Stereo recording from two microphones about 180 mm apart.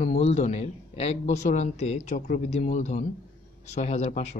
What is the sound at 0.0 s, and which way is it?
Speech, 40° left (ahead or behind).